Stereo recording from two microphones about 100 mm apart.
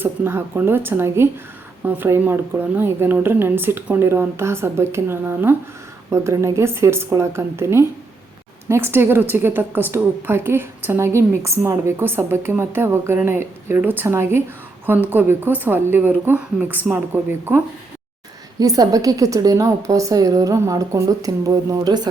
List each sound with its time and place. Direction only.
0.0 s a woman's voice: 20° right (ahead or behind)
18.6 s a woman's voice: 35° right (ahead or behind)